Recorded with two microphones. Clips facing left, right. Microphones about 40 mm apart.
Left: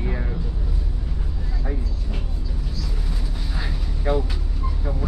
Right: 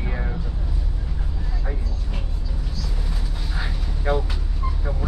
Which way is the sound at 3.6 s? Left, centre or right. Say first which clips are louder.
Right 1 dB; centre.